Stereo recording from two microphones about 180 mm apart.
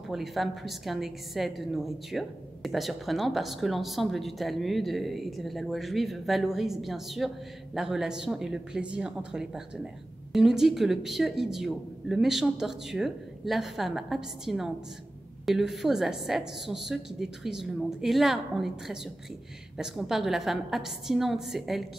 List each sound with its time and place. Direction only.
0.1 s a woman's voice: centre (ahead or behind)